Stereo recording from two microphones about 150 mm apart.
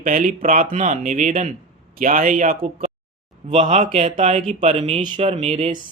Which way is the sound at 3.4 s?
40° right (ahead or behind).